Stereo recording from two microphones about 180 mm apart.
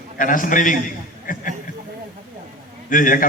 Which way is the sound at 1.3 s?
50° left (ahead or behind).